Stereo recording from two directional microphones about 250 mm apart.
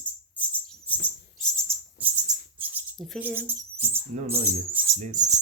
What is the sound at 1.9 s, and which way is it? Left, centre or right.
Bird, centre.